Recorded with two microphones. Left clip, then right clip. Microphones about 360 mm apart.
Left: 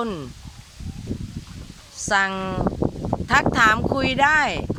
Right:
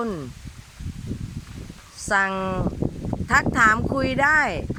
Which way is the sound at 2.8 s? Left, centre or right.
Left.